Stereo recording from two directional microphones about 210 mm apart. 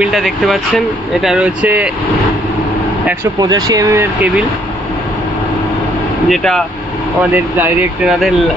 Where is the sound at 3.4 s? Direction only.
20° right (ahead or behind).